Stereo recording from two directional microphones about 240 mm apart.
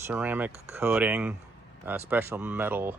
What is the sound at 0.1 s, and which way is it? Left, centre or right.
Speech, centre.